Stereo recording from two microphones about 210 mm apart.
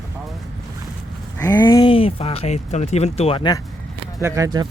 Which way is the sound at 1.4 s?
15° left (ahead or behind).